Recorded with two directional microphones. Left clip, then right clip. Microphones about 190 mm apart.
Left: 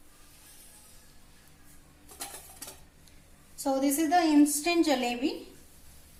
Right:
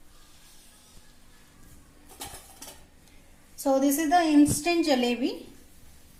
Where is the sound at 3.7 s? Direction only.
30° right (ahead or behind).